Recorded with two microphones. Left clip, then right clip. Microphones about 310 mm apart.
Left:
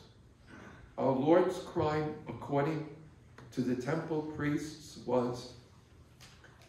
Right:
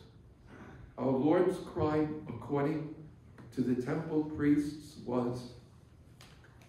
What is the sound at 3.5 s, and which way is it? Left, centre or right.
Speech, centre.